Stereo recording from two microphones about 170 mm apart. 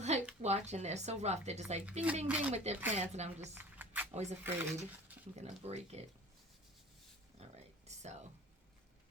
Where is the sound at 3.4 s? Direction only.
10° right (ahead or behind).